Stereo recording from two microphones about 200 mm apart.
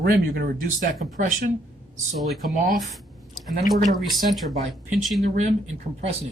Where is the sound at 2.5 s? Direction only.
40° right (ahead or behind).